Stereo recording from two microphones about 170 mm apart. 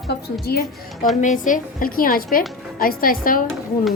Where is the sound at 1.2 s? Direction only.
50° left (ahead or behind).